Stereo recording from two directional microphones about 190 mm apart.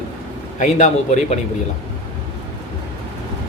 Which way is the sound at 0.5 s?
40° left (ahead or behind).